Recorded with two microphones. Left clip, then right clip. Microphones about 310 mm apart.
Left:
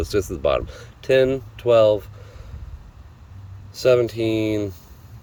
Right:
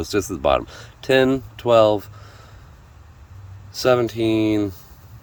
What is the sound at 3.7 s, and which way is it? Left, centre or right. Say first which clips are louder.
Speech: left 1 dB; centre.